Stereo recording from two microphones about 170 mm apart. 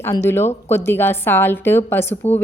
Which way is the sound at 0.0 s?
15° left (ahead or behind).